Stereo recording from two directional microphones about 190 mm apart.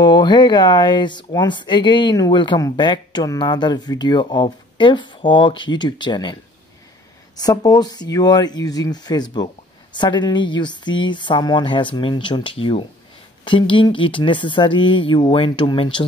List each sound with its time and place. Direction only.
0.0 s speech: 20° left (ahead or behind)
7.3 s speech: 20° left (ahead or behind)